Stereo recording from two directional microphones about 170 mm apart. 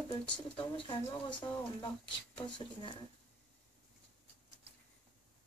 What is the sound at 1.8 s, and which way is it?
Speech, 25° left (ahead or behind).